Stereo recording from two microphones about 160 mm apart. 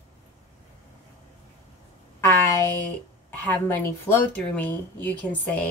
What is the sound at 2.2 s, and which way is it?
Speech, 15° left (ahead or behind).